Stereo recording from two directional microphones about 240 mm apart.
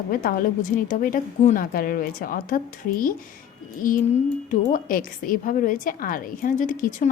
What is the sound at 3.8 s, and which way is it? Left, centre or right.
A woman's voice, left.